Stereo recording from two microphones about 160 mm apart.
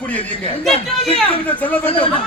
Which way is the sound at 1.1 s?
35° left (ahead or behind).